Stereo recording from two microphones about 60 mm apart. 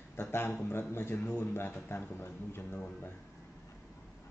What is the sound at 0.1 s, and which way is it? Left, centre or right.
A man's voice, left.